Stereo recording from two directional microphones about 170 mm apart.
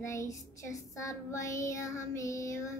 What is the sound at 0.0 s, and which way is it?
Child singing, 15° left (ahead or behind).